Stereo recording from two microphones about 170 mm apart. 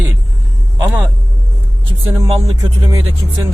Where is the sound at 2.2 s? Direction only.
25° right (ahead or behind).